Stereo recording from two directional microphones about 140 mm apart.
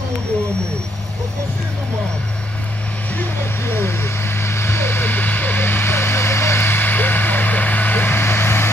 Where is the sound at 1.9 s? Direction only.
5° left (ahead or behind).